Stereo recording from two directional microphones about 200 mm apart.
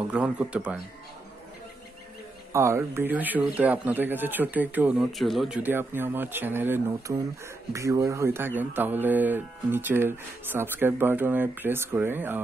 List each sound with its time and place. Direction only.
0.1 s speech: 5° right (ahead or behind)
2.5 s speech: 15° right (ahead or behind)